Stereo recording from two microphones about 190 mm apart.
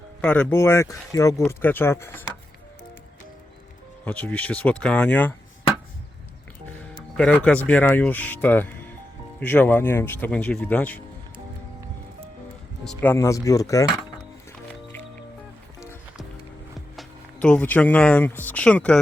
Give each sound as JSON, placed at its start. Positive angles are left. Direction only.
{"t": 0.2, "sound": "speech", "side_deg": 10}
{"t": 4.0, "sound": "speech", "side_deg": 10}
{"t": 7.2, "sound": "speech", "side_deg": 5}
{"t": 12.8, "sound": "speech", "side_deg": 5}
{"t": 16.7, "sound": "speech", "side_deg": 0}